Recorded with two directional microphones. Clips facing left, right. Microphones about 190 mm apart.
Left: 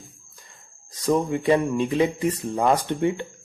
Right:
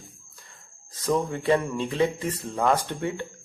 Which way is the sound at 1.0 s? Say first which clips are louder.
Left 3 dB; 15° left (ahead or behind).